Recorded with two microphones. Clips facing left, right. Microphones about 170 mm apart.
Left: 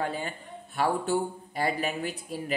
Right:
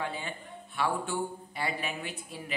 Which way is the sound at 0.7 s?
40° left (ahead or behind).